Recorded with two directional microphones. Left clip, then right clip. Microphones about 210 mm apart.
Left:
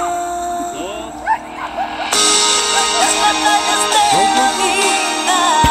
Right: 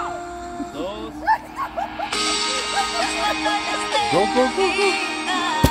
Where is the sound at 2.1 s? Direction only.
40° left (ahead or behind).